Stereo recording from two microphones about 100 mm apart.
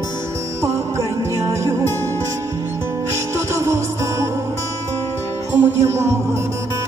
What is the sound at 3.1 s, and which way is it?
Music, 30° right (ahead or behind).